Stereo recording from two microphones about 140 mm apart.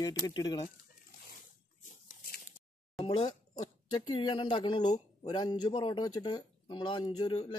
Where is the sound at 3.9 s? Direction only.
35° left (ahead or behind).